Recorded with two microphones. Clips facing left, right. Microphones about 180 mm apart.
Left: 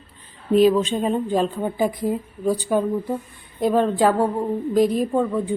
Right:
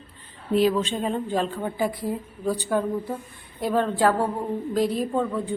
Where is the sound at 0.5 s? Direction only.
15° left (ahead or behind).